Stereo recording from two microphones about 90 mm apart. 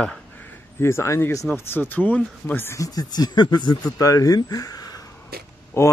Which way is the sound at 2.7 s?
45° left (ahead or behind).